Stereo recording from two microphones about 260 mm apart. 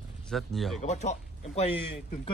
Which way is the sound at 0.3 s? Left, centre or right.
Centre.